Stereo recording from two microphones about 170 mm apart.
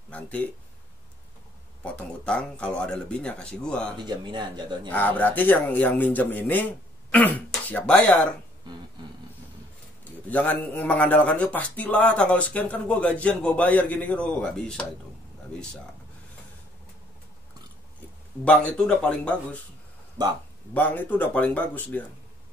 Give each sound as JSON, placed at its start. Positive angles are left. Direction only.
{"t": 0.1, "sound": "speech", "side_deg": 10}
{"t": 1.8, "sound": "a man's voice", "side_deg": 5}
{"t": 4.0, "sound": "a man's voice", "side_deg": -25}
{"t": 4.8, "sound": "a man's voice", "side_deg": 10}
{"t": 10.3, "sound": "a man's voice", "side_deg": 10}
{"t": 18.4, "sound": "a man's voice", "side_deg": 5}
{"t": 20.7, "sound": "a man's voice", "side_deg": 10}